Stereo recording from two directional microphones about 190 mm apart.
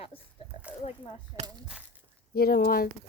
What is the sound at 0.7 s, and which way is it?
Speech, 5° right (ahead or behind).